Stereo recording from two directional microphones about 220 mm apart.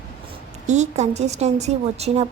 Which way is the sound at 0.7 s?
30° right (ahead or behind).